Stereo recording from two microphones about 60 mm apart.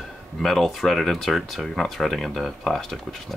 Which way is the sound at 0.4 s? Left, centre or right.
Centre.